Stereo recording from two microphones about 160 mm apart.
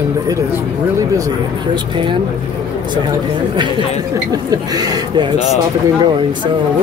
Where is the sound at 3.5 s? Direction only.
30° right (ahead or behind).